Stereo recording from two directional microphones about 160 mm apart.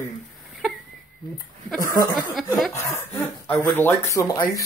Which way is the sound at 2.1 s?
Centre (ahead or behind).